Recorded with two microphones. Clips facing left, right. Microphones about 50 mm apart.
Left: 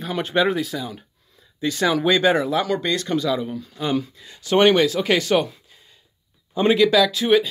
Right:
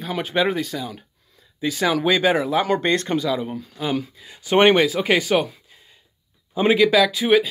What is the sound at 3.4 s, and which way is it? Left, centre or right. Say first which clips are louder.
Speech: even; right.